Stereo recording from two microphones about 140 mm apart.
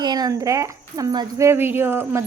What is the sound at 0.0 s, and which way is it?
Speech, 30° right (ahead or behind).